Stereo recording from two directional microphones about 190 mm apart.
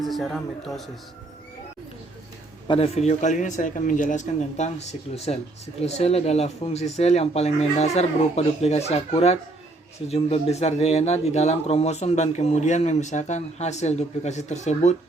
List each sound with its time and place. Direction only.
0.0 s speech: centre (ahead or behind)
2.6 s speech: 30° left (ahead or behind)